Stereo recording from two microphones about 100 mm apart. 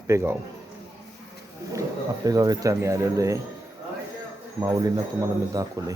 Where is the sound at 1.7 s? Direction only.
35° right (ahead or behind).